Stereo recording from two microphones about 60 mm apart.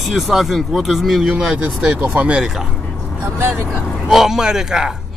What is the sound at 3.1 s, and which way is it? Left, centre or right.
Speech, right.